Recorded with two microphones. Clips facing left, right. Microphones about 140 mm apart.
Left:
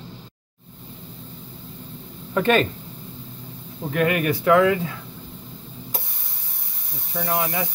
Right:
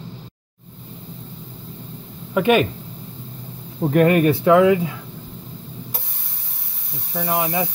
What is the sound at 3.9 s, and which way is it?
Speech, 35° right (ahead or behind).